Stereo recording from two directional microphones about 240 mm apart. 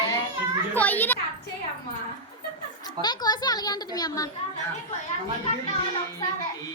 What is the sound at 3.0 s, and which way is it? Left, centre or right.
A child's voice, centre.